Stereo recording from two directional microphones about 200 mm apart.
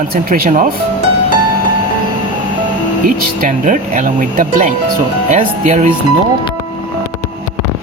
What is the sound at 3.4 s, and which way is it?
Speech, 40° right (ahead or behind).